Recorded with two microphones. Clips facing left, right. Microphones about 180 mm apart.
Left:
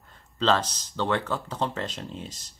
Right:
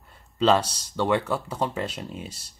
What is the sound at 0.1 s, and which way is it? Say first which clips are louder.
Speech: right 3 dB; 10° right (ahead or behind).